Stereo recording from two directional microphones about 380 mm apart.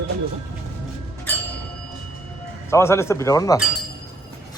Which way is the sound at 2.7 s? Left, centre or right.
Centre.